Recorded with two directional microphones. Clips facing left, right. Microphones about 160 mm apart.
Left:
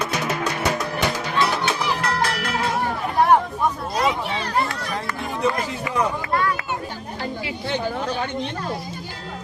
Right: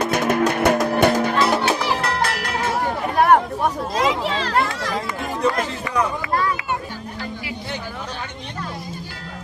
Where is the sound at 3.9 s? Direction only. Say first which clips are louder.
Right 3 dB; 90° right.